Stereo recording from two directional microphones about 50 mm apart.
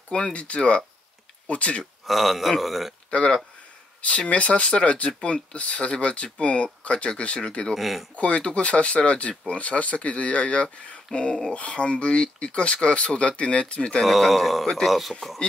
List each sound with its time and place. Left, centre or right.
0.1 s speech: left
2.0 s speech: centre
3.1 s speech: left
7.7 s speech: centre
8.2 s speech: left
14.0 s speech: centre